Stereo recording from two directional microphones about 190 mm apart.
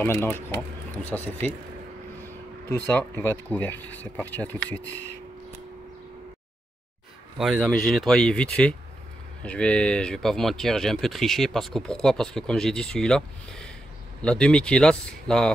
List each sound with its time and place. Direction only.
0.0 s speech: 10° left (ahead or behind)
7.3 s speech: centre (ahead or behind)